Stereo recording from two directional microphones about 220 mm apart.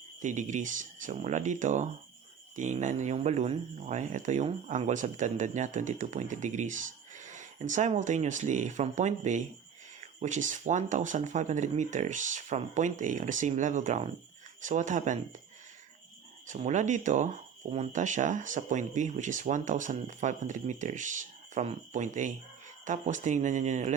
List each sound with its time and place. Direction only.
0.2 s speech: 35° right (ahead or behind)
16.5 s speech: 35° right (ahead or behind)